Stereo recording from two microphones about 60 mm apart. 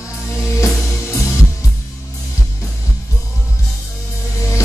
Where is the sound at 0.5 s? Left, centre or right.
Left.